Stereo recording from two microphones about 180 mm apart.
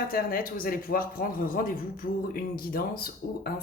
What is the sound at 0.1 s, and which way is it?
A man's voice, 55° left (ahead or behind).